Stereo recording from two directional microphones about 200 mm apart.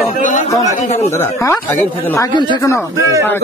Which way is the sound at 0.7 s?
35° left (ahead or behind).